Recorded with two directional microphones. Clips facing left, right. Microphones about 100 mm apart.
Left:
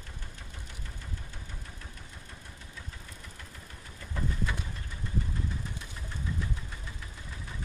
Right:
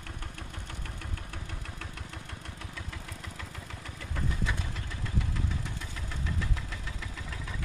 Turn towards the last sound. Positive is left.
turn(degrees=-90)